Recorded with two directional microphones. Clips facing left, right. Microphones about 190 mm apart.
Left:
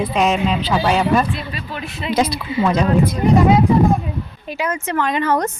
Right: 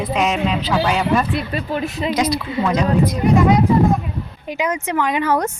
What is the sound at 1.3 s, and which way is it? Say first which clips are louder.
Speech: right 4 dB; 60° right (ahead or behind).